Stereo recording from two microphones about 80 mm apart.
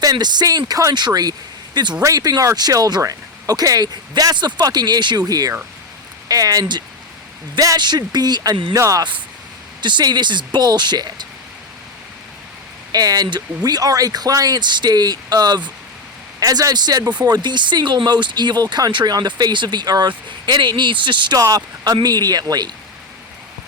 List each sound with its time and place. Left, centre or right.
0.0 s speech: right
2.0 s speech: right
8.8 s speech: right
9.8 s speech: right
12.9 s speech: right
16.4 s speech: right
21.3 s speech: right